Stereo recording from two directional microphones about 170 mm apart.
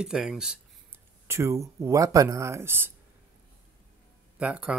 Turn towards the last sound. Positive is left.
turn(degrees=-5)  # may be behind; listen again after turning